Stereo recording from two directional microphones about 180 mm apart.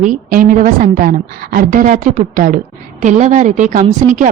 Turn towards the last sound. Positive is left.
turn(degrees=-45)  # may be behind; listen again after turning